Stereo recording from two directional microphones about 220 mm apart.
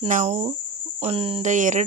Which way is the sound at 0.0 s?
30° right (ahead or behind).